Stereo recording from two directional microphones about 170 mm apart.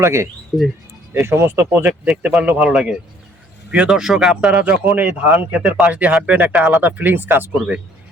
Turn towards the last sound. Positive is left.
turn(degrees=-5)  # may be behind; listen again after turning